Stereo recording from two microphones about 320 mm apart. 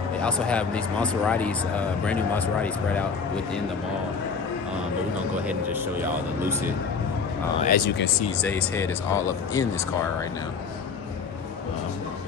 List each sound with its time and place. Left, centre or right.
0.2 s speech: centre
5.3 s speech: centre
7.6 s speech: left
8.4 s speech: centre